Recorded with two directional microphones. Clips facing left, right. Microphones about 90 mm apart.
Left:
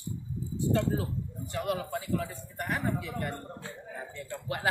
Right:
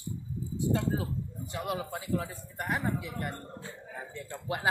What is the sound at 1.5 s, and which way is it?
A man's voice, 20° right (ahead or behind).